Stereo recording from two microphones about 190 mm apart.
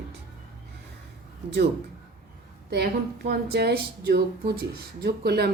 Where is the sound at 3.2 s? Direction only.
55° right (ahead or behind).